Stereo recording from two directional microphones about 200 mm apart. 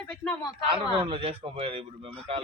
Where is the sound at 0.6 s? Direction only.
25° right (ahead or behind).